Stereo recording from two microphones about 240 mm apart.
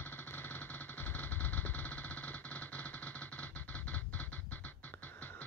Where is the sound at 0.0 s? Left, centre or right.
Centre.